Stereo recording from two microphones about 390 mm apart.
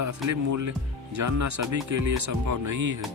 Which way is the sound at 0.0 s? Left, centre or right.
Right.